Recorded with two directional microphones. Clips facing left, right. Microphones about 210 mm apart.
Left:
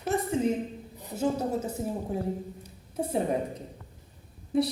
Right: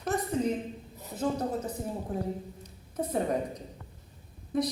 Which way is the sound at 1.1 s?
25° left (ahead or behind).